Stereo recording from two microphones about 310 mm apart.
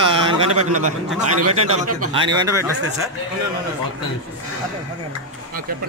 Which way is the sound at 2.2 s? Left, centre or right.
Centre.